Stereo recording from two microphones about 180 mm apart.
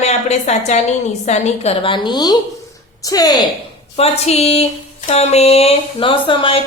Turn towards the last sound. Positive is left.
turn(degrees=30)  # may be behind; listen again after turning